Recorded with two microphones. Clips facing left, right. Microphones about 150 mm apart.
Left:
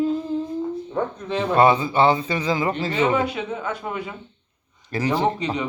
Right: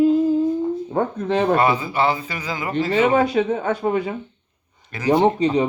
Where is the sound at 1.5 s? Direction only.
25° left (ahead or behind).